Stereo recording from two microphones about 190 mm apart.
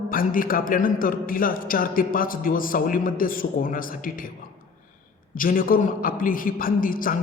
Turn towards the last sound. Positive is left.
turn(degrees=45)  # may be behind; listen again after turning